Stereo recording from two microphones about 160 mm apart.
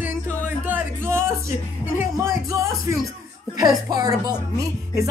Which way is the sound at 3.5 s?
25° right (ahead or behind).